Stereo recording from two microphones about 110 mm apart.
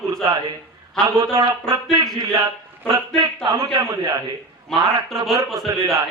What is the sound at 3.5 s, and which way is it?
Speech, 30° right (ahead or behind).